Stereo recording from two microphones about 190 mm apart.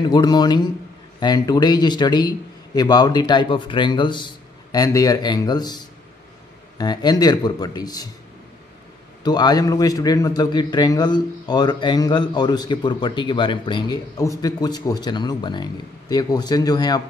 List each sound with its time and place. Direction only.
0.1 s a man's voice: 20° left (ahead or behind)
6.8 s a man's voice: 20° left (ahead or behind)
9.2 s a man's voice: 20° left (ahead or behind)